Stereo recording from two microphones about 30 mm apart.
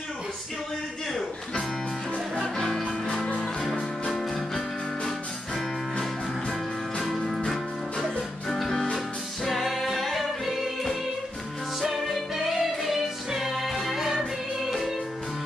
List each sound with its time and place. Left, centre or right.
2.5 s music: centre
4.1 s music: centre
7.1 s music: centre